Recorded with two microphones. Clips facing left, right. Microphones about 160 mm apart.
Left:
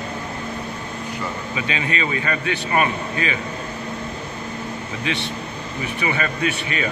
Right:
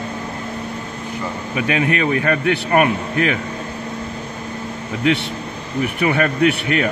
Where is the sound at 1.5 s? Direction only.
60° right (ahead or behind).